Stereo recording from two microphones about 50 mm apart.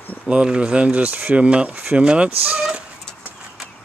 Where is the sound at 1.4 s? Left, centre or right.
Right.